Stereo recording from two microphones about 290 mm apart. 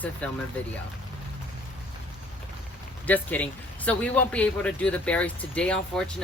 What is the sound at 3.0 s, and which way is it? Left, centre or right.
A man's voice, centre.